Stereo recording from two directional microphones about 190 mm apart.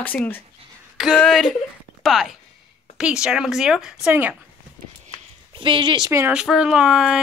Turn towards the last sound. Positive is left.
turn(degrees=-5)  # may be behind; listen again after turning